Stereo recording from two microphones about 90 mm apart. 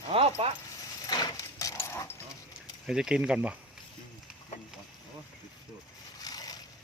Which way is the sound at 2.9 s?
10° right (ahead or behind).